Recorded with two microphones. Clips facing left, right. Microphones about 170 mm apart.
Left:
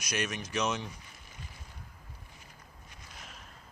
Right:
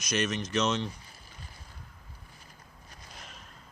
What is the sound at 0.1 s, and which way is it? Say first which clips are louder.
Speech: right 5 dB; 10° left (ahead or behind).